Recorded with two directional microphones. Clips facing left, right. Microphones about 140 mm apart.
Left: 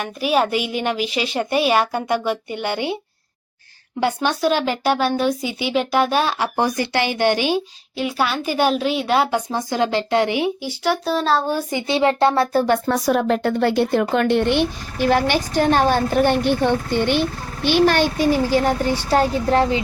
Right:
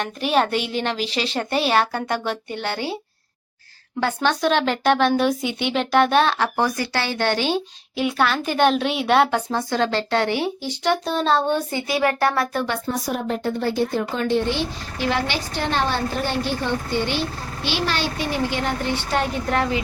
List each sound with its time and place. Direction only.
0.0 s speech: 10° left (ahead or behind)
4.0 s a woman's voice: 10° left (ahead or behind)
9.3 s speech: 15° left (ahead or behind)
11.7 s speech: 20° left (ahead or behind)
12.6 s a woman's voice: 50° left (ahead or behind)
12.9 s a woman's voice: 90° left; by 19.8 s 30° left (ahead or behind)